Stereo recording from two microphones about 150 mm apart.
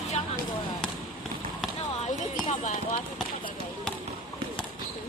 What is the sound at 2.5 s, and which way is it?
Clip-clop, 55° left (ahead or behind).